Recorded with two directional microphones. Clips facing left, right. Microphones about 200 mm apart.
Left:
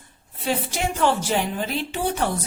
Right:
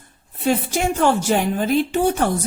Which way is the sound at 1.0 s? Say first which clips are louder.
Right 3 dB; 50° right (ahead or behind).